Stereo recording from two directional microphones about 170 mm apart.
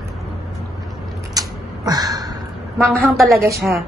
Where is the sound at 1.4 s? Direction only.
20° right (ahead or behind).